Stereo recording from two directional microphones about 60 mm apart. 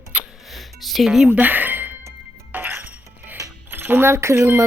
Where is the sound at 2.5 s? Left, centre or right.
Right.